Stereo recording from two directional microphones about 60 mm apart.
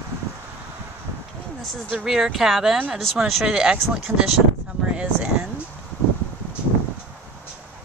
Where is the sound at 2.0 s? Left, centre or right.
Centre.